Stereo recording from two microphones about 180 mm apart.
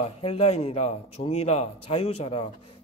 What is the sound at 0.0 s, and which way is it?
A man's voice, 35° left (ahead or behind).